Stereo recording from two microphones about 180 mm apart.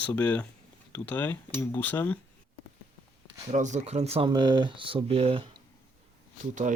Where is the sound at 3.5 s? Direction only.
40° right (ahead or behind).